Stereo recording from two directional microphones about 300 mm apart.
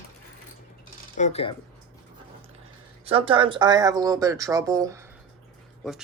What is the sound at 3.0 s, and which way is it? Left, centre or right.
Speech, centre.